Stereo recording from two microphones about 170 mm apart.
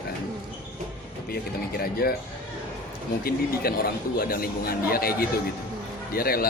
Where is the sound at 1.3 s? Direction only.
65° left (ahead or behind).